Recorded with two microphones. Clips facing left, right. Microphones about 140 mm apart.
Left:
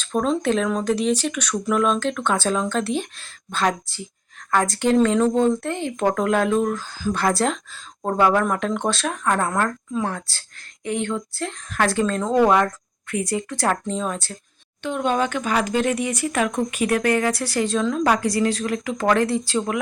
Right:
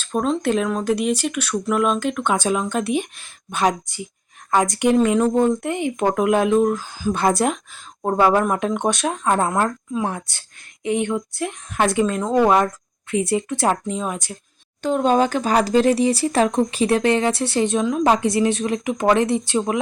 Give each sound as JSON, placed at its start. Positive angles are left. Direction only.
{"t": 0.0, "sound": "speech", "side_deg": -5}
{"t": 13.8, "sound": "speech", "side_deg": -10}
{"t": 14.8, "sound": "speech", "side_deg": -40}